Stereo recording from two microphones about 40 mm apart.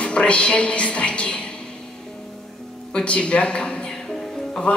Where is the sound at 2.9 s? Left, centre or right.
Left.